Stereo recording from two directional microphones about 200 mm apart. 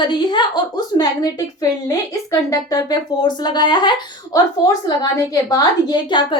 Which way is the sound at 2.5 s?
20° left (ahead or behind).